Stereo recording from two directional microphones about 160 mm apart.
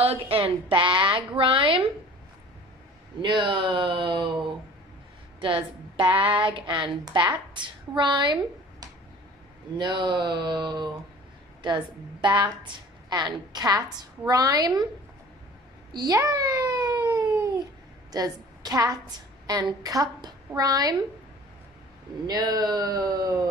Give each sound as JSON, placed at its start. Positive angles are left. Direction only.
{"t": 0.0, "sound": "a woman's voice", "side_deg": -35}
{"t": 3.2, "sound": "a woman's voice", "side_deg": -30}
{"t": 6.0, "sound": "a sound", "side_deg": -10}
{"t": 6.4, "sound": "a woman's voice", "side_deg": -30}
{"t": 15.9, "sound": "cat", "side_deg": -25}
{"t": 18.1, "sound": "a woman's voice", "side_deg": -25}
{"t": 22.2, "sound": "a woman's voice", "side_deg": -25}